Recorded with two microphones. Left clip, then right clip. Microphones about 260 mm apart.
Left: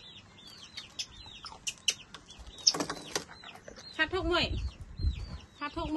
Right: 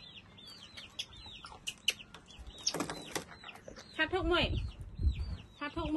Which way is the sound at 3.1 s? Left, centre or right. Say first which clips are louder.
Left 5 dB; left.